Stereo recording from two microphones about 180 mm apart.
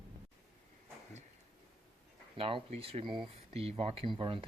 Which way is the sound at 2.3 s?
30° right (ahead or behind).